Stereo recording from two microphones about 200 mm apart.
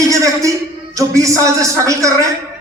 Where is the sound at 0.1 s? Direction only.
15° right (ahead or behind).